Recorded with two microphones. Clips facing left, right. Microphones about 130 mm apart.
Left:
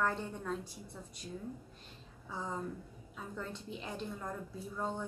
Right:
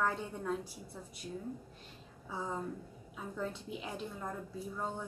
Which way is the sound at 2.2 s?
5° right (ahead or behind).